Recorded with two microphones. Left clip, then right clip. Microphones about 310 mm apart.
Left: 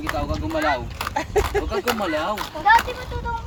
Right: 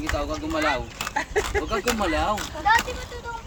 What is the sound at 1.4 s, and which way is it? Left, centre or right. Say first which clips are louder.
Speech: left 4 dB; left.